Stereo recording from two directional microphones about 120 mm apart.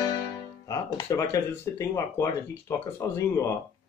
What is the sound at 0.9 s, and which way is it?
Speech, 25° left (ahead or behind).